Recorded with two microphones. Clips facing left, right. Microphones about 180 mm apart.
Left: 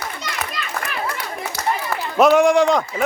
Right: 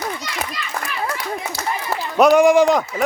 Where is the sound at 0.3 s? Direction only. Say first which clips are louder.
Even; 55° left (ahead or behind).